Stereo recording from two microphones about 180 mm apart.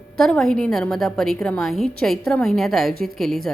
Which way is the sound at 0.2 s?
Centre (ahead or behind).